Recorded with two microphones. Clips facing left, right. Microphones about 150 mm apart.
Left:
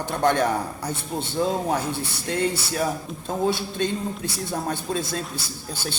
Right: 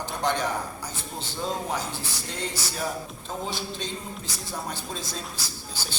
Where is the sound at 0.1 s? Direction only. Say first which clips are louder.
Left 7 dB; 55° left (ahead or behind).